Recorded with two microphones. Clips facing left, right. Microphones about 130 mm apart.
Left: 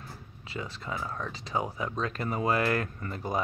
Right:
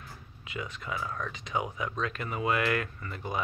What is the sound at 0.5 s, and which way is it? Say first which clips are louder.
Speech: even; 30° left (ahead or behind).